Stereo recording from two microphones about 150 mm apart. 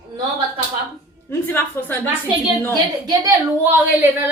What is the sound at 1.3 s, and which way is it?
Speech, 15° left (ahead or behind).